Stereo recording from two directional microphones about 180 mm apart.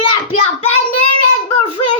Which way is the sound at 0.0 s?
30° left (ahead or behind).